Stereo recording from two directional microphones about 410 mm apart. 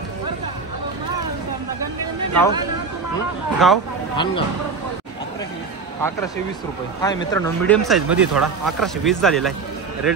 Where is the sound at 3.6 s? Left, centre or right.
Centre.